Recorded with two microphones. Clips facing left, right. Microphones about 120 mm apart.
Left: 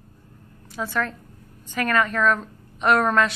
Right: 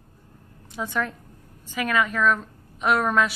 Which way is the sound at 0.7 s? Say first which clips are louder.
Left 1 dB; 20° right (ahead or behind).